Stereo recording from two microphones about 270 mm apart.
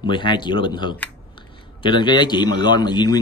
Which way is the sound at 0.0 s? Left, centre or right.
Centre.